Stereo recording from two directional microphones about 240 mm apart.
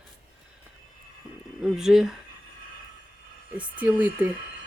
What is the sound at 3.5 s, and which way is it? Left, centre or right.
Speech, centre.